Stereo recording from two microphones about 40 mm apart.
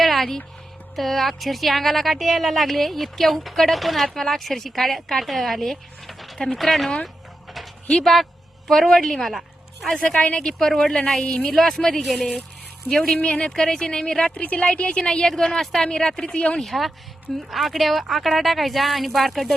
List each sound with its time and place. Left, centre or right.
0.0 s a sound: centre
0.9 s speech: centre
8.0 s a woman's voice: centre
9.9 s a woman's voice: left
11.5 s a woman's voice: centre
13.1 s a woman's voice: left
14.3 s a woman's voice: left; by 16.3 s centre
16.3 s speech: left
16.6 s speech: centre